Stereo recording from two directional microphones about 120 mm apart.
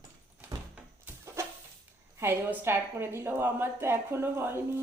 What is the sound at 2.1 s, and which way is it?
A woman's voice, 15° right (ahead or behind).